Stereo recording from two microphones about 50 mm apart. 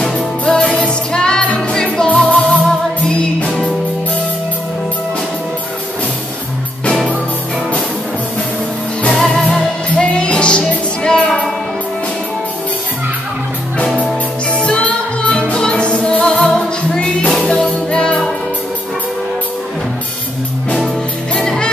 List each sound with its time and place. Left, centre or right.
0.0 s music: left
9.5 s music: left
14.5 s music: left
21.4 s music: centre